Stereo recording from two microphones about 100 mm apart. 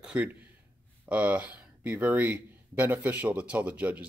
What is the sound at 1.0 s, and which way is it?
Speech, 15° right (ahead or behind).